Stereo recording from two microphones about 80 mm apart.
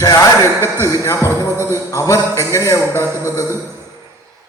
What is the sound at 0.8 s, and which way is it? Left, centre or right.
A man's voice, left.